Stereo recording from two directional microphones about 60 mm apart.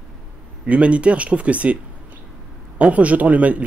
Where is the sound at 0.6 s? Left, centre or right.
Right.